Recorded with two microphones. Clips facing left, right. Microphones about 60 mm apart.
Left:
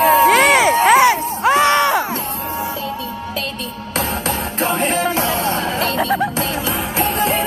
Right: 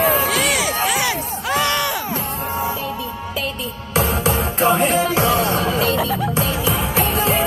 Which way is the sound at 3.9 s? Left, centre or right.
Centre.